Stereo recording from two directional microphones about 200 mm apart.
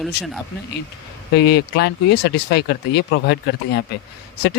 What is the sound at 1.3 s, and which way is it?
Speech, 55° left (ahead or behind).